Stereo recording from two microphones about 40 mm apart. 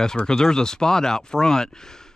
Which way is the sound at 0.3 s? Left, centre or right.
Centre.